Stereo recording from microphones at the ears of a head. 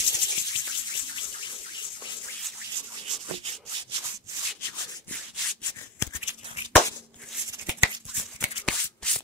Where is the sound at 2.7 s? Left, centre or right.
Right.